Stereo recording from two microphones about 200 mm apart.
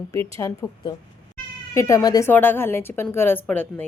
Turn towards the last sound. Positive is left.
turn(degrees=10)  # may be behind; listen again after turning